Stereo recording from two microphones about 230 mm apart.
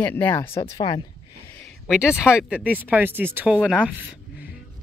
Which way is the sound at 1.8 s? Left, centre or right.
Centre.